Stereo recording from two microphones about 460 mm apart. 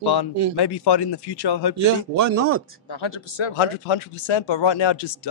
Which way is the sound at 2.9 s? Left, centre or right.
Left.